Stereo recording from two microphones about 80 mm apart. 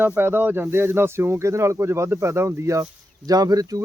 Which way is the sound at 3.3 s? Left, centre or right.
Right.